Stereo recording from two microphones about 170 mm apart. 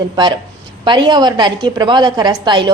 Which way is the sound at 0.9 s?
25° right (ahead or behind).